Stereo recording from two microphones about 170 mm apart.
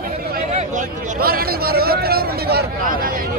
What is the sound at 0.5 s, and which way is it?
Speech, 45° right (ahead or behind).